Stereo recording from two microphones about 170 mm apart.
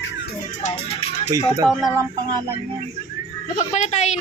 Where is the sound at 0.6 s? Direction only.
40° left (ahead or behind).